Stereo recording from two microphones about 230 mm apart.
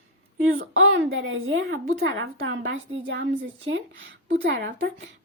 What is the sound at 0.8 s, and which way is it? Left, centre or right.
A woman's voice, right.